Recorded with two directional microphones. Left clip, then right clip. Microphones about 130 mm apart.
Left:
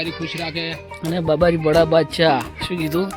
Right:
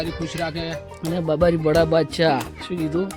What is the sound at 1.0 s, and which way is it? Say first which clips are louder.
Speech: left 2 dB; centre (ahead or behind).